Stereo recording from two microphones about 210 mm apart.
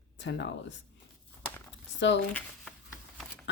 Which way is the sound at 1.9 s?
60° left (ahead or behind).